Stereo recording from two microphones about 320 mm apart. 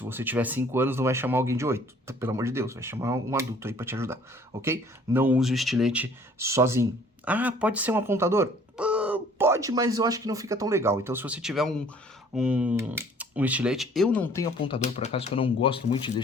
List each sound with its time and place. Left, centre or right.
0.0 s speech: centre
14.7 s speech: centre